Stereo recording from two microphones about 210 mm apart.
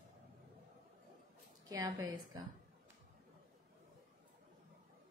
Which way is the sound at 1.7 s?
15° right (ahead or behind).